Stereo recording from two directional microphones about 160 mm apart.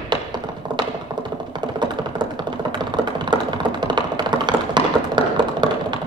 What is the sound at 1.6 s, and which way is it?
Computer keyboard, 25° right (ahead or behind).